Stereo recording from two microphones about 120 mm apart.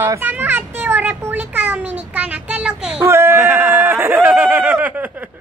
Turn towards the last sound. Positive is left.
turn(degrees=-15)  # may be behind; listen again after turning